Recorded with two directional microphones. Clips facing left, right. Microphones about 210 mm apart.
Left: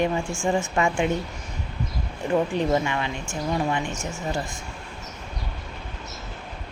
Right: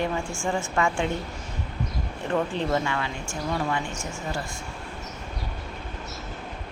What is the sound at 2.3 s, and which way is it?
Speech, 15° left (ahead or behind).